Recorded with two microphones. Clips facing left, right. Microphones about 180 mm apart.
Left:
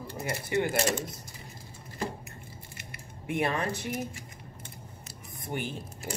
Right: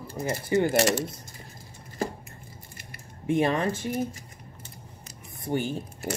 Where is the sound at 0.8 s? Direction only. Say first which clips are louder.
Right 5 dB; 75° right (ahead or behind).